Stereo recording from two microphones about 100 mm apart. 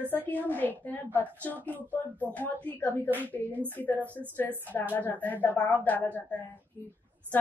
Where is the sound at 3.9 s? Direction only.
20° right (ahead or behind).